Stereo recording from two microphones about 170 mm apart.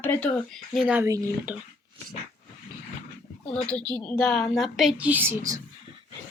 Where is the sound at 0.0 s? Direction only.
10° left (ahead or behind); by 1.6 s 10° right (ahead or behind).